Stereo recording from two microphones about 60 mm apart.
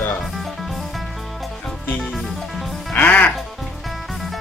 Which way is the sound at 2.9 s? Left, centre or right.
Left.